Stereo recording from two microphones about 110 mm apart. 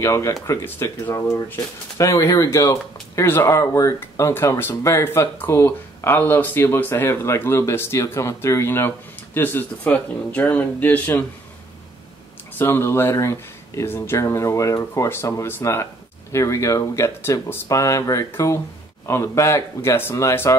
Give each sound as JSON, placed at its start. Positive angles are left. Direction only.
{"t": 0.0, "sound": "speech", "side_deg": 25}
{"t": 12.5, "sound": "speech", "side_deg": 20}